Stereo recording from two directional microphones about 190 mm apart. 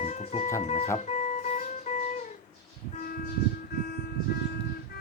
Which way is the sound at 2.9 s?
45° left (ahead or behind).